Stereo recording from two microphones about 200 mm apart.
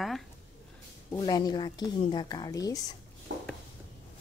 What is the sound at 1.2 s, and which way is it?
A woman's voice, 20° left (ahead or behind).